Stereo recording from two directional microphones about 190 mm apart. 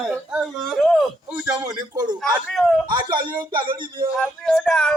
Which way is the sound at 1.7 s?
20° right (ahead or behind).